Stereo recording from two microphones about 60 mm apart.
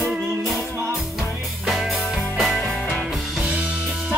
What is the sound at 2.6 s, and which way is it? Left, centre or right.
Music, centre.